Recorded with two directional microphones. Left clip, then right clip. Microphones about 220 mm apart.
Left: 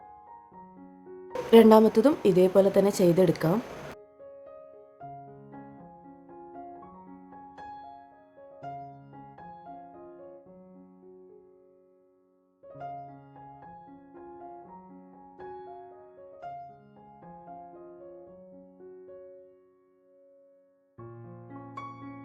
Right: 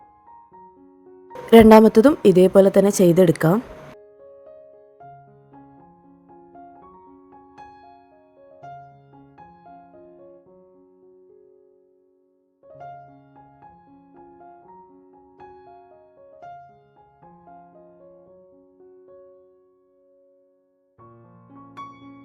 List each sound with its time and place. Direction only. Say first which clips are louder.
0.6 s music: right 2 dB; centre (ahead or behind)
1.5 s a woman's voice: right 7 dB; 30° right (ahead or behind)
14.3 s piano: left 1 dB; centre (ahead or behind)
18.9 s music: even; centre (ahead or behind)